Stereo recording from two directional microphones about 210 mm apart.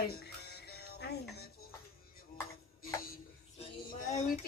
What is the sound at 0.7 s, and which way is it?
Music, 50° left (ahead or behind).